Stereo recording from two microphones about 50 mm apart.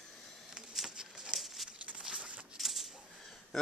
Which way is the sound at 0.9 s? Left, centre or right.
Centre.